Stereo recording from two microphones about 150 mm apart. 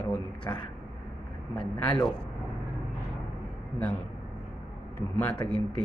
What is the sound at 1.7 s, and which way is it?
Speech, 10° left (ahead or behind).